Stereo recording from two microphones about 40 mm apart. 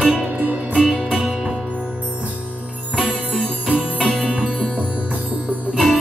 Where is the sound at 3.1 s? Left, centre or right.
Right.